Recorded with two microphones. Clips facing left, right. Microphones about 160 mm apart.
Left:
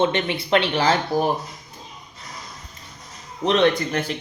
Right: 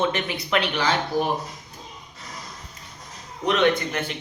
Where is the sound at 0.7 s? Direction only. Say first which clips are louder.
Left 3 dB; 40° left (ahead or behind).